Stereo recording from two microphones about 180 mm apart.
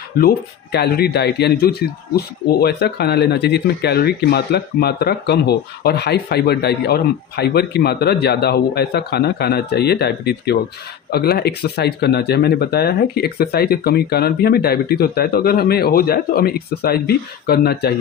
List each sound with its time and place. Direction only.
0.2 s speech: 60° left (ahead or behind)